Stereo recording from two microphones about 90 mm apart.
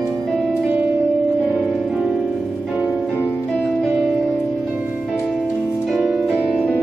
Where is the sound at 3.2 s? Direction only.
15° left (ahead or behind).